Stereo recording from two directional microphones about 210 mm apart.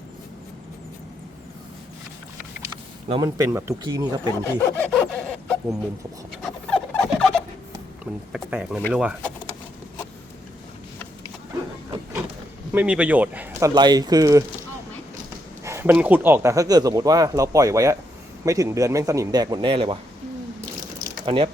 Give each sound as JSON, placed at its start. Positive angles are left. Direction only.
{"t": 3.1, "sound": "speech", "side_deg": -15}
{"t": 4.4, "sound": "a sound", "side_deg": 10}
{"t": 6.4, "sound": "rodents", "side_deg": 0}
{"t": 8.3, "sound": "speech", "side_deg": -5}
{"t": 12.7, "sound": "speech", "side_deg": -5}
{"t": 15.6, "sound": "speech", "side_deg": -10}
{"t": 21.2, "sound": "speech", "side_deg": -25}